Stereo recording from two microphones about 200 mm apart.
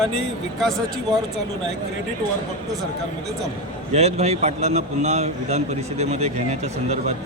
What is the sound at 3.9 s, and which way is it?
A man's voice, 30° right (ahead or behind).